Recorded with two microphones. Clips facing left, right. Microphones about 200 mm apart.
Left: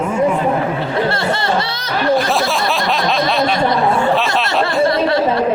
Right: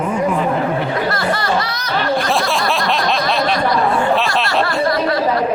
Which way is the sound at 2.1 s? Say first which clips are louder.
Left 1 dB; centre (ahead or behind).